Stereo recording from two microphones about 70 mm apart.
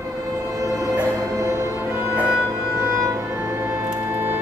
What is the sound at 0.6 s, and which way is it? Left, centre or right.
Music, right.